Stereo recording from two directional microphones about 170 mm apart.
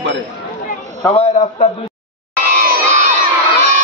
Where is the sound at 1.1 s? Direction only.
35° left (ahead or behind).